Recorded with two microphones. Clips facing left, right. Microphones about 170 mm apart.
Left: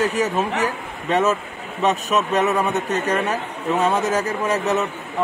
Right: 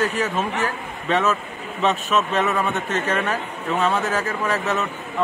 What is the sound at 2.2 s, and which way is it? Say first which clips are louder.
Speech: left 3 dB; 20° left (ahead or behind).